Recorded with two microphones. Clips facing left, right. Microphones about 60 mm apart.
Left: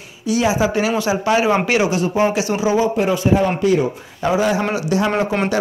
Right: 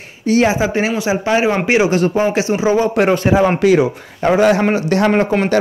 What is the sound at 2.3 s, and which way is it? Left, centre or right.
Speech, right.